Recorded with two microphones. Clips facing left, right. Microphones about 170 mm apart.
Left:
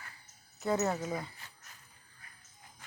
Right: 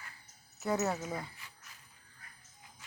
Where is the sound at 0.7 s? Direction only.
5° right (ahead or behind).